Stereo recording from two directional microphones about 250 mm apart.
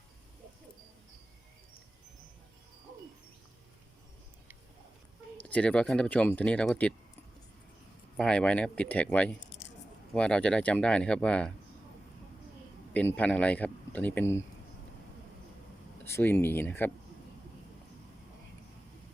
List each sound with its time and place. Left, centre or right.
5.4 s speech: centre
8.1 s speech: centre
9.5 s a sound: left
10.2 s speech: centre
12.9 s speech: centre
16.0 s speech: centre